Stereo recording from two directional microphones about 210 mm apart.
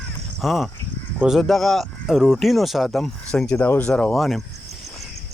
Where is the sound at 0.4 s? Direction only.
Centre (ahead or behind).